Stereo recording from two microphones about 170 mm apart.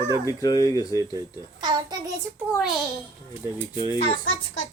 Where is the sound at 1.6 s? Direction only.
25° right (ahead or behind).